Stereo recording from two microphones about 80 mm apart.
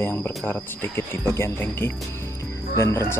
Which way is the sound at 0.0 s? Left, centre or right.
Left.